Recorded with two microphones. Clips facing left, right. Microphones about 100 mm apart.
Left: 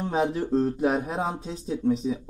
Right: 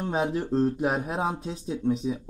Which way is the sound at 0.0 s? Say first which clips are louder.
Left 2 dB; centre (ahead or behind).